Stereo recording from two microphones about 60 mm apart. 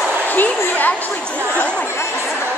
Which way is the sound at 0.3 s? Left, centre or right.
Left.